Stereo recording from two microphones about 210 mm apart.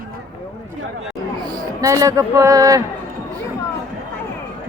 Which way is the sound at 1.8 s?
15° right (ahead or behind).